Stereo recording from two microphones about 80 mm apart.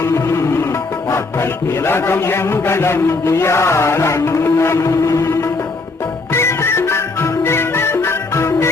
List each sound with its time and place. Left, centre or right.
0.0 s music: left
1.1 s a man's voice: left
6.3 s music: left